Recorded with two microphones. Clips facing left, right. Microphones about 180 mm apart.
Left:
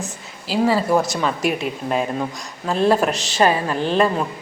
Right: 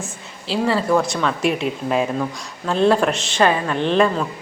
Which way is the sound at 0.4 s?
5° left (ahead or behind).